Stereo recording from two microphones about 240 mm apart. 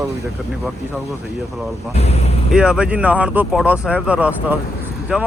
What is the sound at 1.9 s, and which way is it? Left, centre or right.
Speech, left.